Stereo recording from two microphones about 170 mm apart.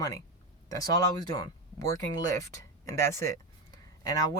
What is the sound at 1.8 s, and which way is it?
Speech, 20° left (ahead or behind).